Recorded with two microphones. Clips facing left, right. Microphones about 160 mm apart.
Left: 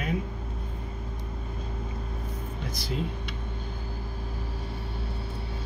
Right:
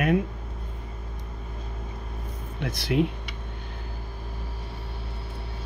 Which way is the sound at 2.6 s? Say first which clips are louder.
Right 9 dB; 70° right (ahead or behind).